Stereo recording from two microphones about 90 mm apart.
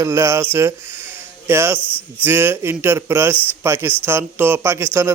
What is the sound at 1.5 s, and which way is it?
Speech, 25° right (ahead or behind).